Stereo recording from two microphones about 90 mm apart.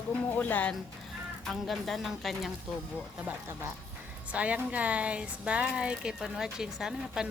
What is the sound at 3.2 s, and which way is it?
Speech, 30° right (ahead or behind).